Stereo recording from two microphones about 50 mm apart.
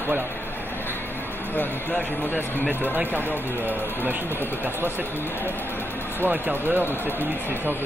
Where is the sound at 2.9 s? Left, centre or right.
Right.